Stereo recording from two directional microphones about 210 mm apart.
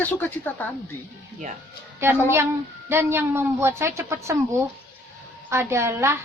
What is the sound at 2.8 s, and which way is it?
A woman's voice, 10° right (ahead or behind).